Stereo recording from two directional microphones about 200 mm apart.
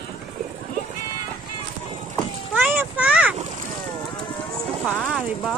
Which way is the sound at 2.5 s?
10° right (ahead or behind).